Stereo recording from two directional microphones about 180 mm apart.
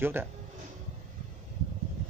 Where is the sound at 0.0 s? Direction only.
10° right (ahead or behind).